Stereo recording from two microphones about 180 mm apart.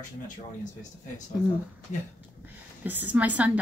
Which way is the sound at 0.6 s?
45° left (ahead or behind).